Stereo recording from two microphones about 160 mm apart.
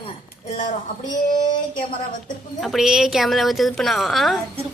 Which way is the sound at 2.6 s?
Centre (ahead or behind).